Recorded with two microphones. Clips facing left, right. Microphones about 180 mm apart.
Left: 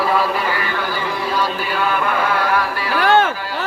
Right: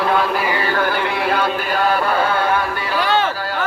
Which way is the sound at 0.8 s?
60° right (ahead or behind).